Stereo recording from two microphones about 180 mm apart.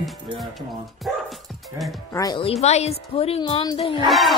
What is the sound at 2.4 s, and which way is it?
A woman's voice, 35° left (ahead or behind).